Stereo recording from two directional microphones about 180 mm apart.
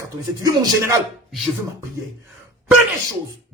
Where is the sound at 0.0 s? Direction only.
20° right (ahead or behind).